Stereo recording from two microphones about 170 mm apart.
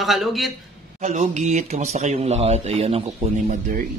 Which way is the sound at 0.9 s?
45° right (ahead or behind).